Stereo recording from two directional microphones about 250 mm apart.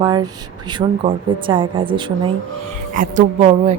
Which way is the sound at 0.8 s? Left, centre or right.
Right.